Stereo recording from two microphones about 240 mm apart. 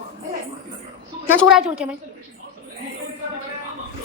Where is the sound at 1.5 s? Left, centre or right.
Centre.